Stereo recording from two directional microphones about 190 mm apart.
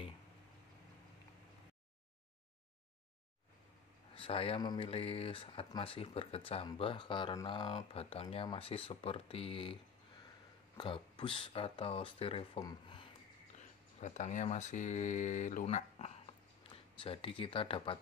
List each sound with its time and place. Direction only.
4.1 s speech: 30° left (ahead or behind)
10.8 s speech: 25° left (ahead or behind)
13.6 s speech: 40° left (ahead or behind)